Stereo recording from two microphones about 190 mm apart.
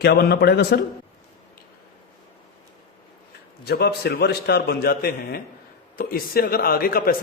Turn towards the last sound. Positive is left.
turn(degrees=50)  # may be behind; listen again after turning